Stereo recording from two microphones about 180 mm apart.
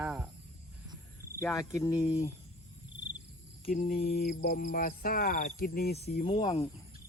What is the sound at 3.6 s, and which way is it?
Mantra, 50° left (ahead or behind).